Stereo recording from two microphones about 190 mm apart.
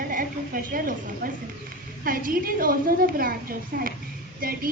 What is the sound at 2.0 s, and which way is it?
A woman's voice, 45° right (ahead or behind).